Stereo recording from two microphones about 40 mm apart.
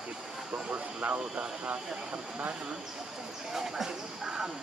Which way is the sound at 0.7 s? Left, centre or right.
Right.